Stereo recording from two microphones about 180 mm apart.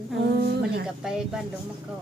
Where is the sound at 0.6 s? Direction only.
60° right (ahead or behind).